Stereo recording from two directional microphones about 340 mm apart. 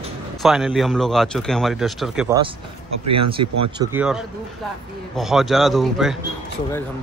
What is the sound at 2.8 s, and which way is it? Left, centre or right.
Speech, right.